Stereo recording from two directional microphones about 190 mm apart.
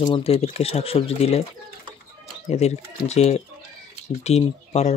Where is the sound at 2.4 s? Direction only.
35° left (ahead or behind).